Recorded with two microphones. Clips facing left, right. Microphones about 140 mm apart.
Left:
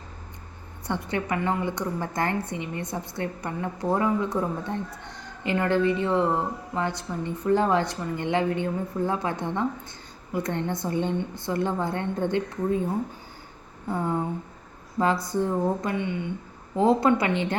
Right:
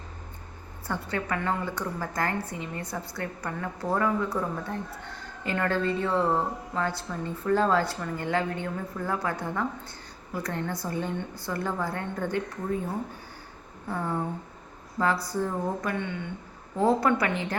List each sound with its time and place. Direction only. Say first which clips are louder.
0.9 s a woman's voice: left 3 dB; 20° left (ahead or behind)
13.9 s a woman's voice: left 3 dB; 20° left (ahead or behind)